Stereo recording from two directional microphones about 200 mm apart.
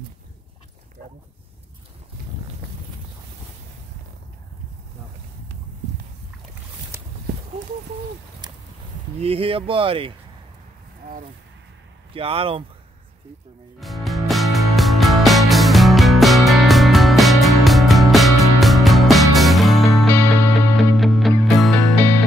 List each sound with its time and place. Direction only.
8.4 s a sound: 20° right (ahead or behind)
9.2 s speech: 30° right (ahead or behind)
12.1 s speech: 30° right (ahead or behind)
13.7 s music: centre (ahead or behind)
20.1 s music: 10° left (ahead or behind)
20.7 s music: centre (ahead or behind)